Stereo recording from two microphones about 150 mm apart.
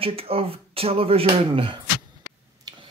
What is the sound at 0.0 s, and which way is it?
Speech, 40° right (ahead or behind).